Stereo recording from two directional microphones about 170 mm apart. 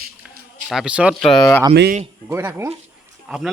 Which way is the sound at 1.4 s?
15° left (ahead or behind).